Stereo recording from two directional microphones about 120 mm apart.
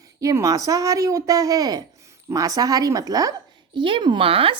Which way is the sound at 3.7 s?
40° right (ahead or behind).